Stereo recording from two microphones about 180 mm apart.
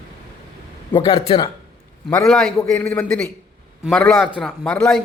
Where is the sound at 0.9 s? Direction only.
30° left (ahead or behind).